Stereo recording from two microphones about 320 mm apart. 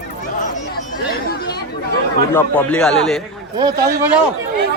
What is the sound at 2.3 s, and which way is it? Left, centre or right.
Speech, centre.